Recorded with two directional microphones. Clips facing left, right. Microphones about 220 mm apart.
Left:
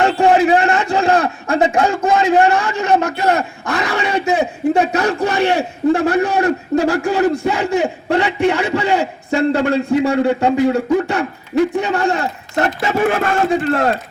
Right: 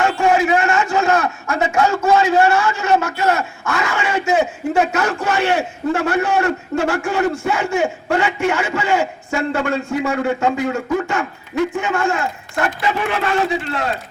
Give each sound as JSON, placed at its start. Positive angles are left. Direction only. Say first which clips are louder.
{"t": 0.0, "sound": "a sound", "louder": "left 3 dB", "side_deg": 35}
{"t": 2.0, "sound": "a man's voice", "louder": "left 1 dB", "side_deg": 15}
{"t": 3.2, "sound": "a man's voice", "louder": "left 2 dB", "side_deg": 35}